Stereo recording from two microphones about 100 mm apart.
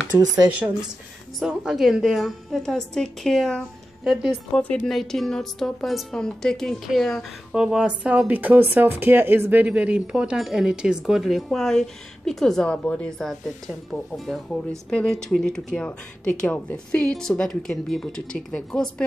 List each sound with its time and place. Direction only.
0.1 s speech: 20° right (ahead or behind)
1.6 s a woman's voice: 5° right (ahead or behind)
4.0 s speech: 5° right (ahead or behind)
4.6 s a woman's voice: 15° left (ahead or behind)